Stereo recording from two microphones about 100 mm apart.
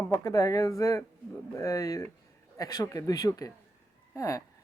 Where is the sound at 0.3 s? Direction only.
35° left (ahead or behind).